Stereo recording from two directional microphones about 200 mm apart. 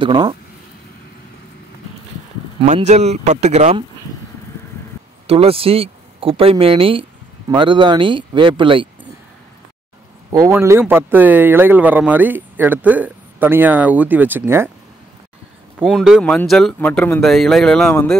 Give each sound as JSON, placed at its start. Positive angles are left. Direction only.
{"t": 0.0, "sound": "speech", "side_deg": -25}
{"t": 2.6, "sound": "speech", "side_deg": -35}
{"t": 5.2, "sound": "speech", "side_deg": -30}
{"t": 10.4, "sound": "speech", "side_deg": -15}
{"t": 15.8, "sound": "speech", "side_deg": 0}